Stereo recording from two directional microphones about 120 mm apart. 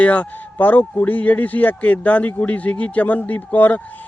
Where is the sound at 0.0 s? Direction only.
10° left (ahead or behind).